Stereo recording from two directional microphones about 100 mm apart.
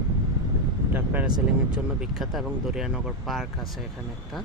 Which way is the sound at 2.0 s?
5° right (ahead or behind).